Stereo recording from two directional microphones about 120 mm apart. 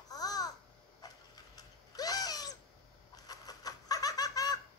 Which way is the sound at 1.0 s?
35° left (ahead or behind).